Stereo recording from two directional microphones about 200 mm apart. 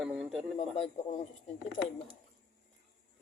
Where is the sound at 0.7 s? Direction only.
30° left (ahead or behind).